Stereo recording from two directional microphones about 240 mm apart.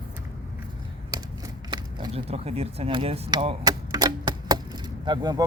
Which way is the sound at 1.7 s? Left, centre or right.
Centre.